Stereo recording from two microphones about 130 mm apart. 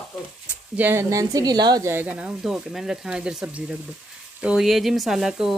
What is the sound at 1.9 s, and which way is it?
A woman's voice, 15° right (ahead or behind).